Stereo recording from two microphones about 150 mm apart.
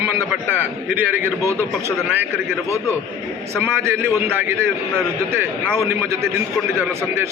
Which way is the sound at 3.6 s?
15° right (ahead or behind).